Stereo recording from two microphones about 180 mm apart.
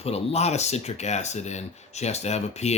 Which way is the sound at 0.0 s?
35° left (ahead or behind).